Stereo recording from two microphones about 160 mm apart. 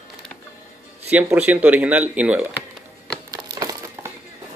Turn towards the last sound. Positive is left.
turn(degrees=-25)  # may be behind; listen again after turning